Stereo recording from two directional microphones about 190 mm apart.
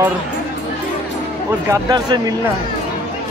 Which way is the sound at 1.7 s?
20° right (ahead or behind).